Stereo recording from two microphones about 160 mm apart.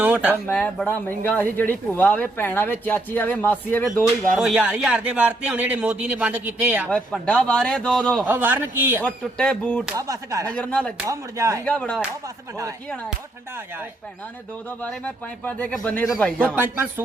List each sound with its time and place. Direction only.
0.0 s speech: 10° right (ahead or behind)
0.4 s speech: 10° left (ahead or behind)
4.4 s speech: 5° right (ahead or behind)
6.9 s a man's voice: 5° left (ahead or behind)
8.2 s speech: 10° right (ahead or behind)
9.0 s speech: 5° left (ahead or behind)
9.9 s speech: 20° right (ahead or behind)
10.5 s speech: 5° left (ahead or behind)
11.0 s speech: 20° right (ahead or behind)
11.6 s speech: 5° left (ahead or behind)
14.8 s speech: 5° left (ahead or behind)
16.6 s speech: 10° right (ahead or behind)